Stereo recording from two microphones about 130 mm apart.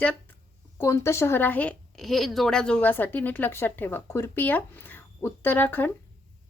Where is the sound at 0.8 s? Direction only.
20° left (ahead or behind).